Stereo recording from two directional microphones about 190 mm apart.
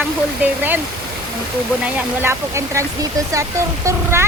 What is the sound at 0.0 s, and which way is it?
Speech, 10° right (ahead or behind).